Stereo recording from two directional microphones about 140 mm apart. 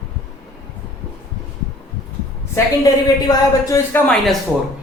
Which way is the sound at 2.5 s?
25° left (ahead or behind).